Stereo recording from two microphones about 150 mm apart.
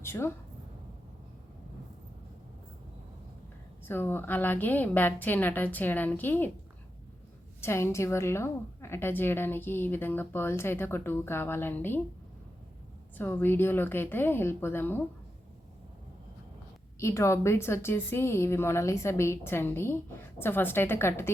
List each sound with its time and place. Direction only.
0.0 s a woman's voice: 15° left (ahead or behind)
3.8 s speech: 15° left (ahead or behind)
7.6 s speech: 15° left (ahead or behind)
13.1 s speech: 15° left (ahead or behind)
17.0 s speech: 20° left (ahead or behind)